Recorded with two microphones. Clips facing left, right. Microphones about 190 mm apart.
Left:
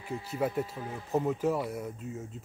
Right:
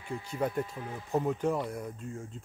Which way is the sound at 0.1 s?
5° left (ahead or behind).